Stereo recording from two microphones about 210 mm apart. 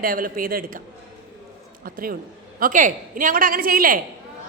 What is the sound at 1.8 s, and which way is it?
A man's voice, 45° right (ahead or behind).